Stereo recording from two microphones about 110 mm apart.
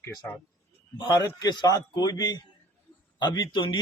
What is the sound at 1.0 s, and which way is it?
Speech, 40° left (ahead or behind).